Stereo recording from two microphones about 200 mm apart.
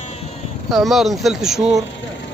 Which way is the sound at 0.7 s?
Centre (ahead or behind).